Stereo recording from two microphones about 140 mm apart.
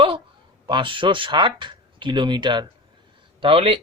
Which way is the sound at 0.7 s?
35° right (ahead or behind).